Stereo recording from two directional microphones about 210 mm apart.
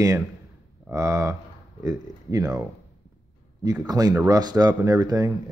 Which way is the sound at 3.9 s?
20° right (ahead or behind).